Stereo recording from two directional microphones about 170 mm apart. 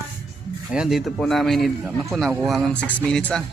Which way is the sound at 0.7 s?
5° right (ahead or behind).